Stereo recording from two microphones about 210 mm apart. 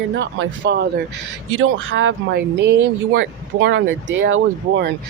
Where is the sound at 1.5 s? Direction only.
70° right (ahead or behind).